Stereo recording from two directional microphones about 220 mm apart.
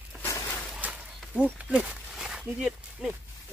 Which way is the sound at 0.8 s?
5° right (ahead or behind).